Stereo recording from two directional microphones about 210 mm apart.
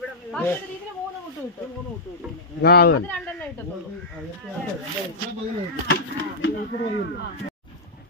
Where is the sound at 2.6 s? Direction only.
50° left (ahead or behind).